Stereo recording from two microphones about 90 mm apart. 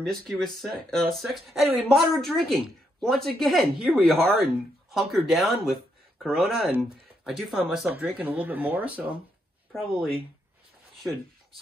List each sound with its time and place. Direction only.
0.0 s speech: 5° left (ahead or behind)
7.9 s speech: 20° right (ahead or behind)
9.7 s speech: centre (ahead or behind)